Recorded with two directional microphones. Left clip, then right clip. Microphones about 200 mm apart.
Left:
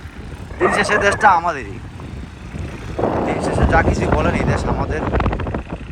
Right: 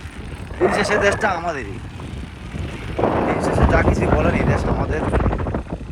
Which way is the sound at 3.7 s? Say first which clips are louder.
Left 4 dB; 20° left (ahead or behind).